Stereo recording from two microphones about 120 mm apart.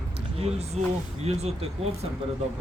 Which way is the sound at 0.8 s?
65° right (ahead or behind).